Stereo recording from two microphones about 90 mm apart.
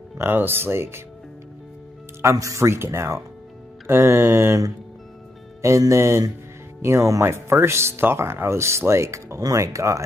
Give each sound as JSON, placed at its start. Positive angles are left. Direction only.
{"t": 0.2, "sound": "music", "side_deg": -25}
{"t": 2.2, "sound": "speech", "side_deg": -35}
{"t": 3.8, "sound": "music", "side_deg": -25}
{"t": 5.6, "sound": "speech", "side_deg": -35}